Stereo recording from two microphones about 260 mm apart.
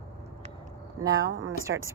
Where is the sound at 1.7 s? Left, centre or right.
Right.